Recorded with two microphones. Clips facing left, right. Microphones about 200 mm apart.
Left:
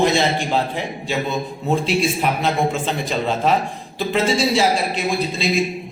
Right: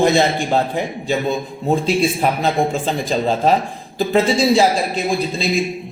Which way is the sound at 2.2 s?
40° right (ahead or behind).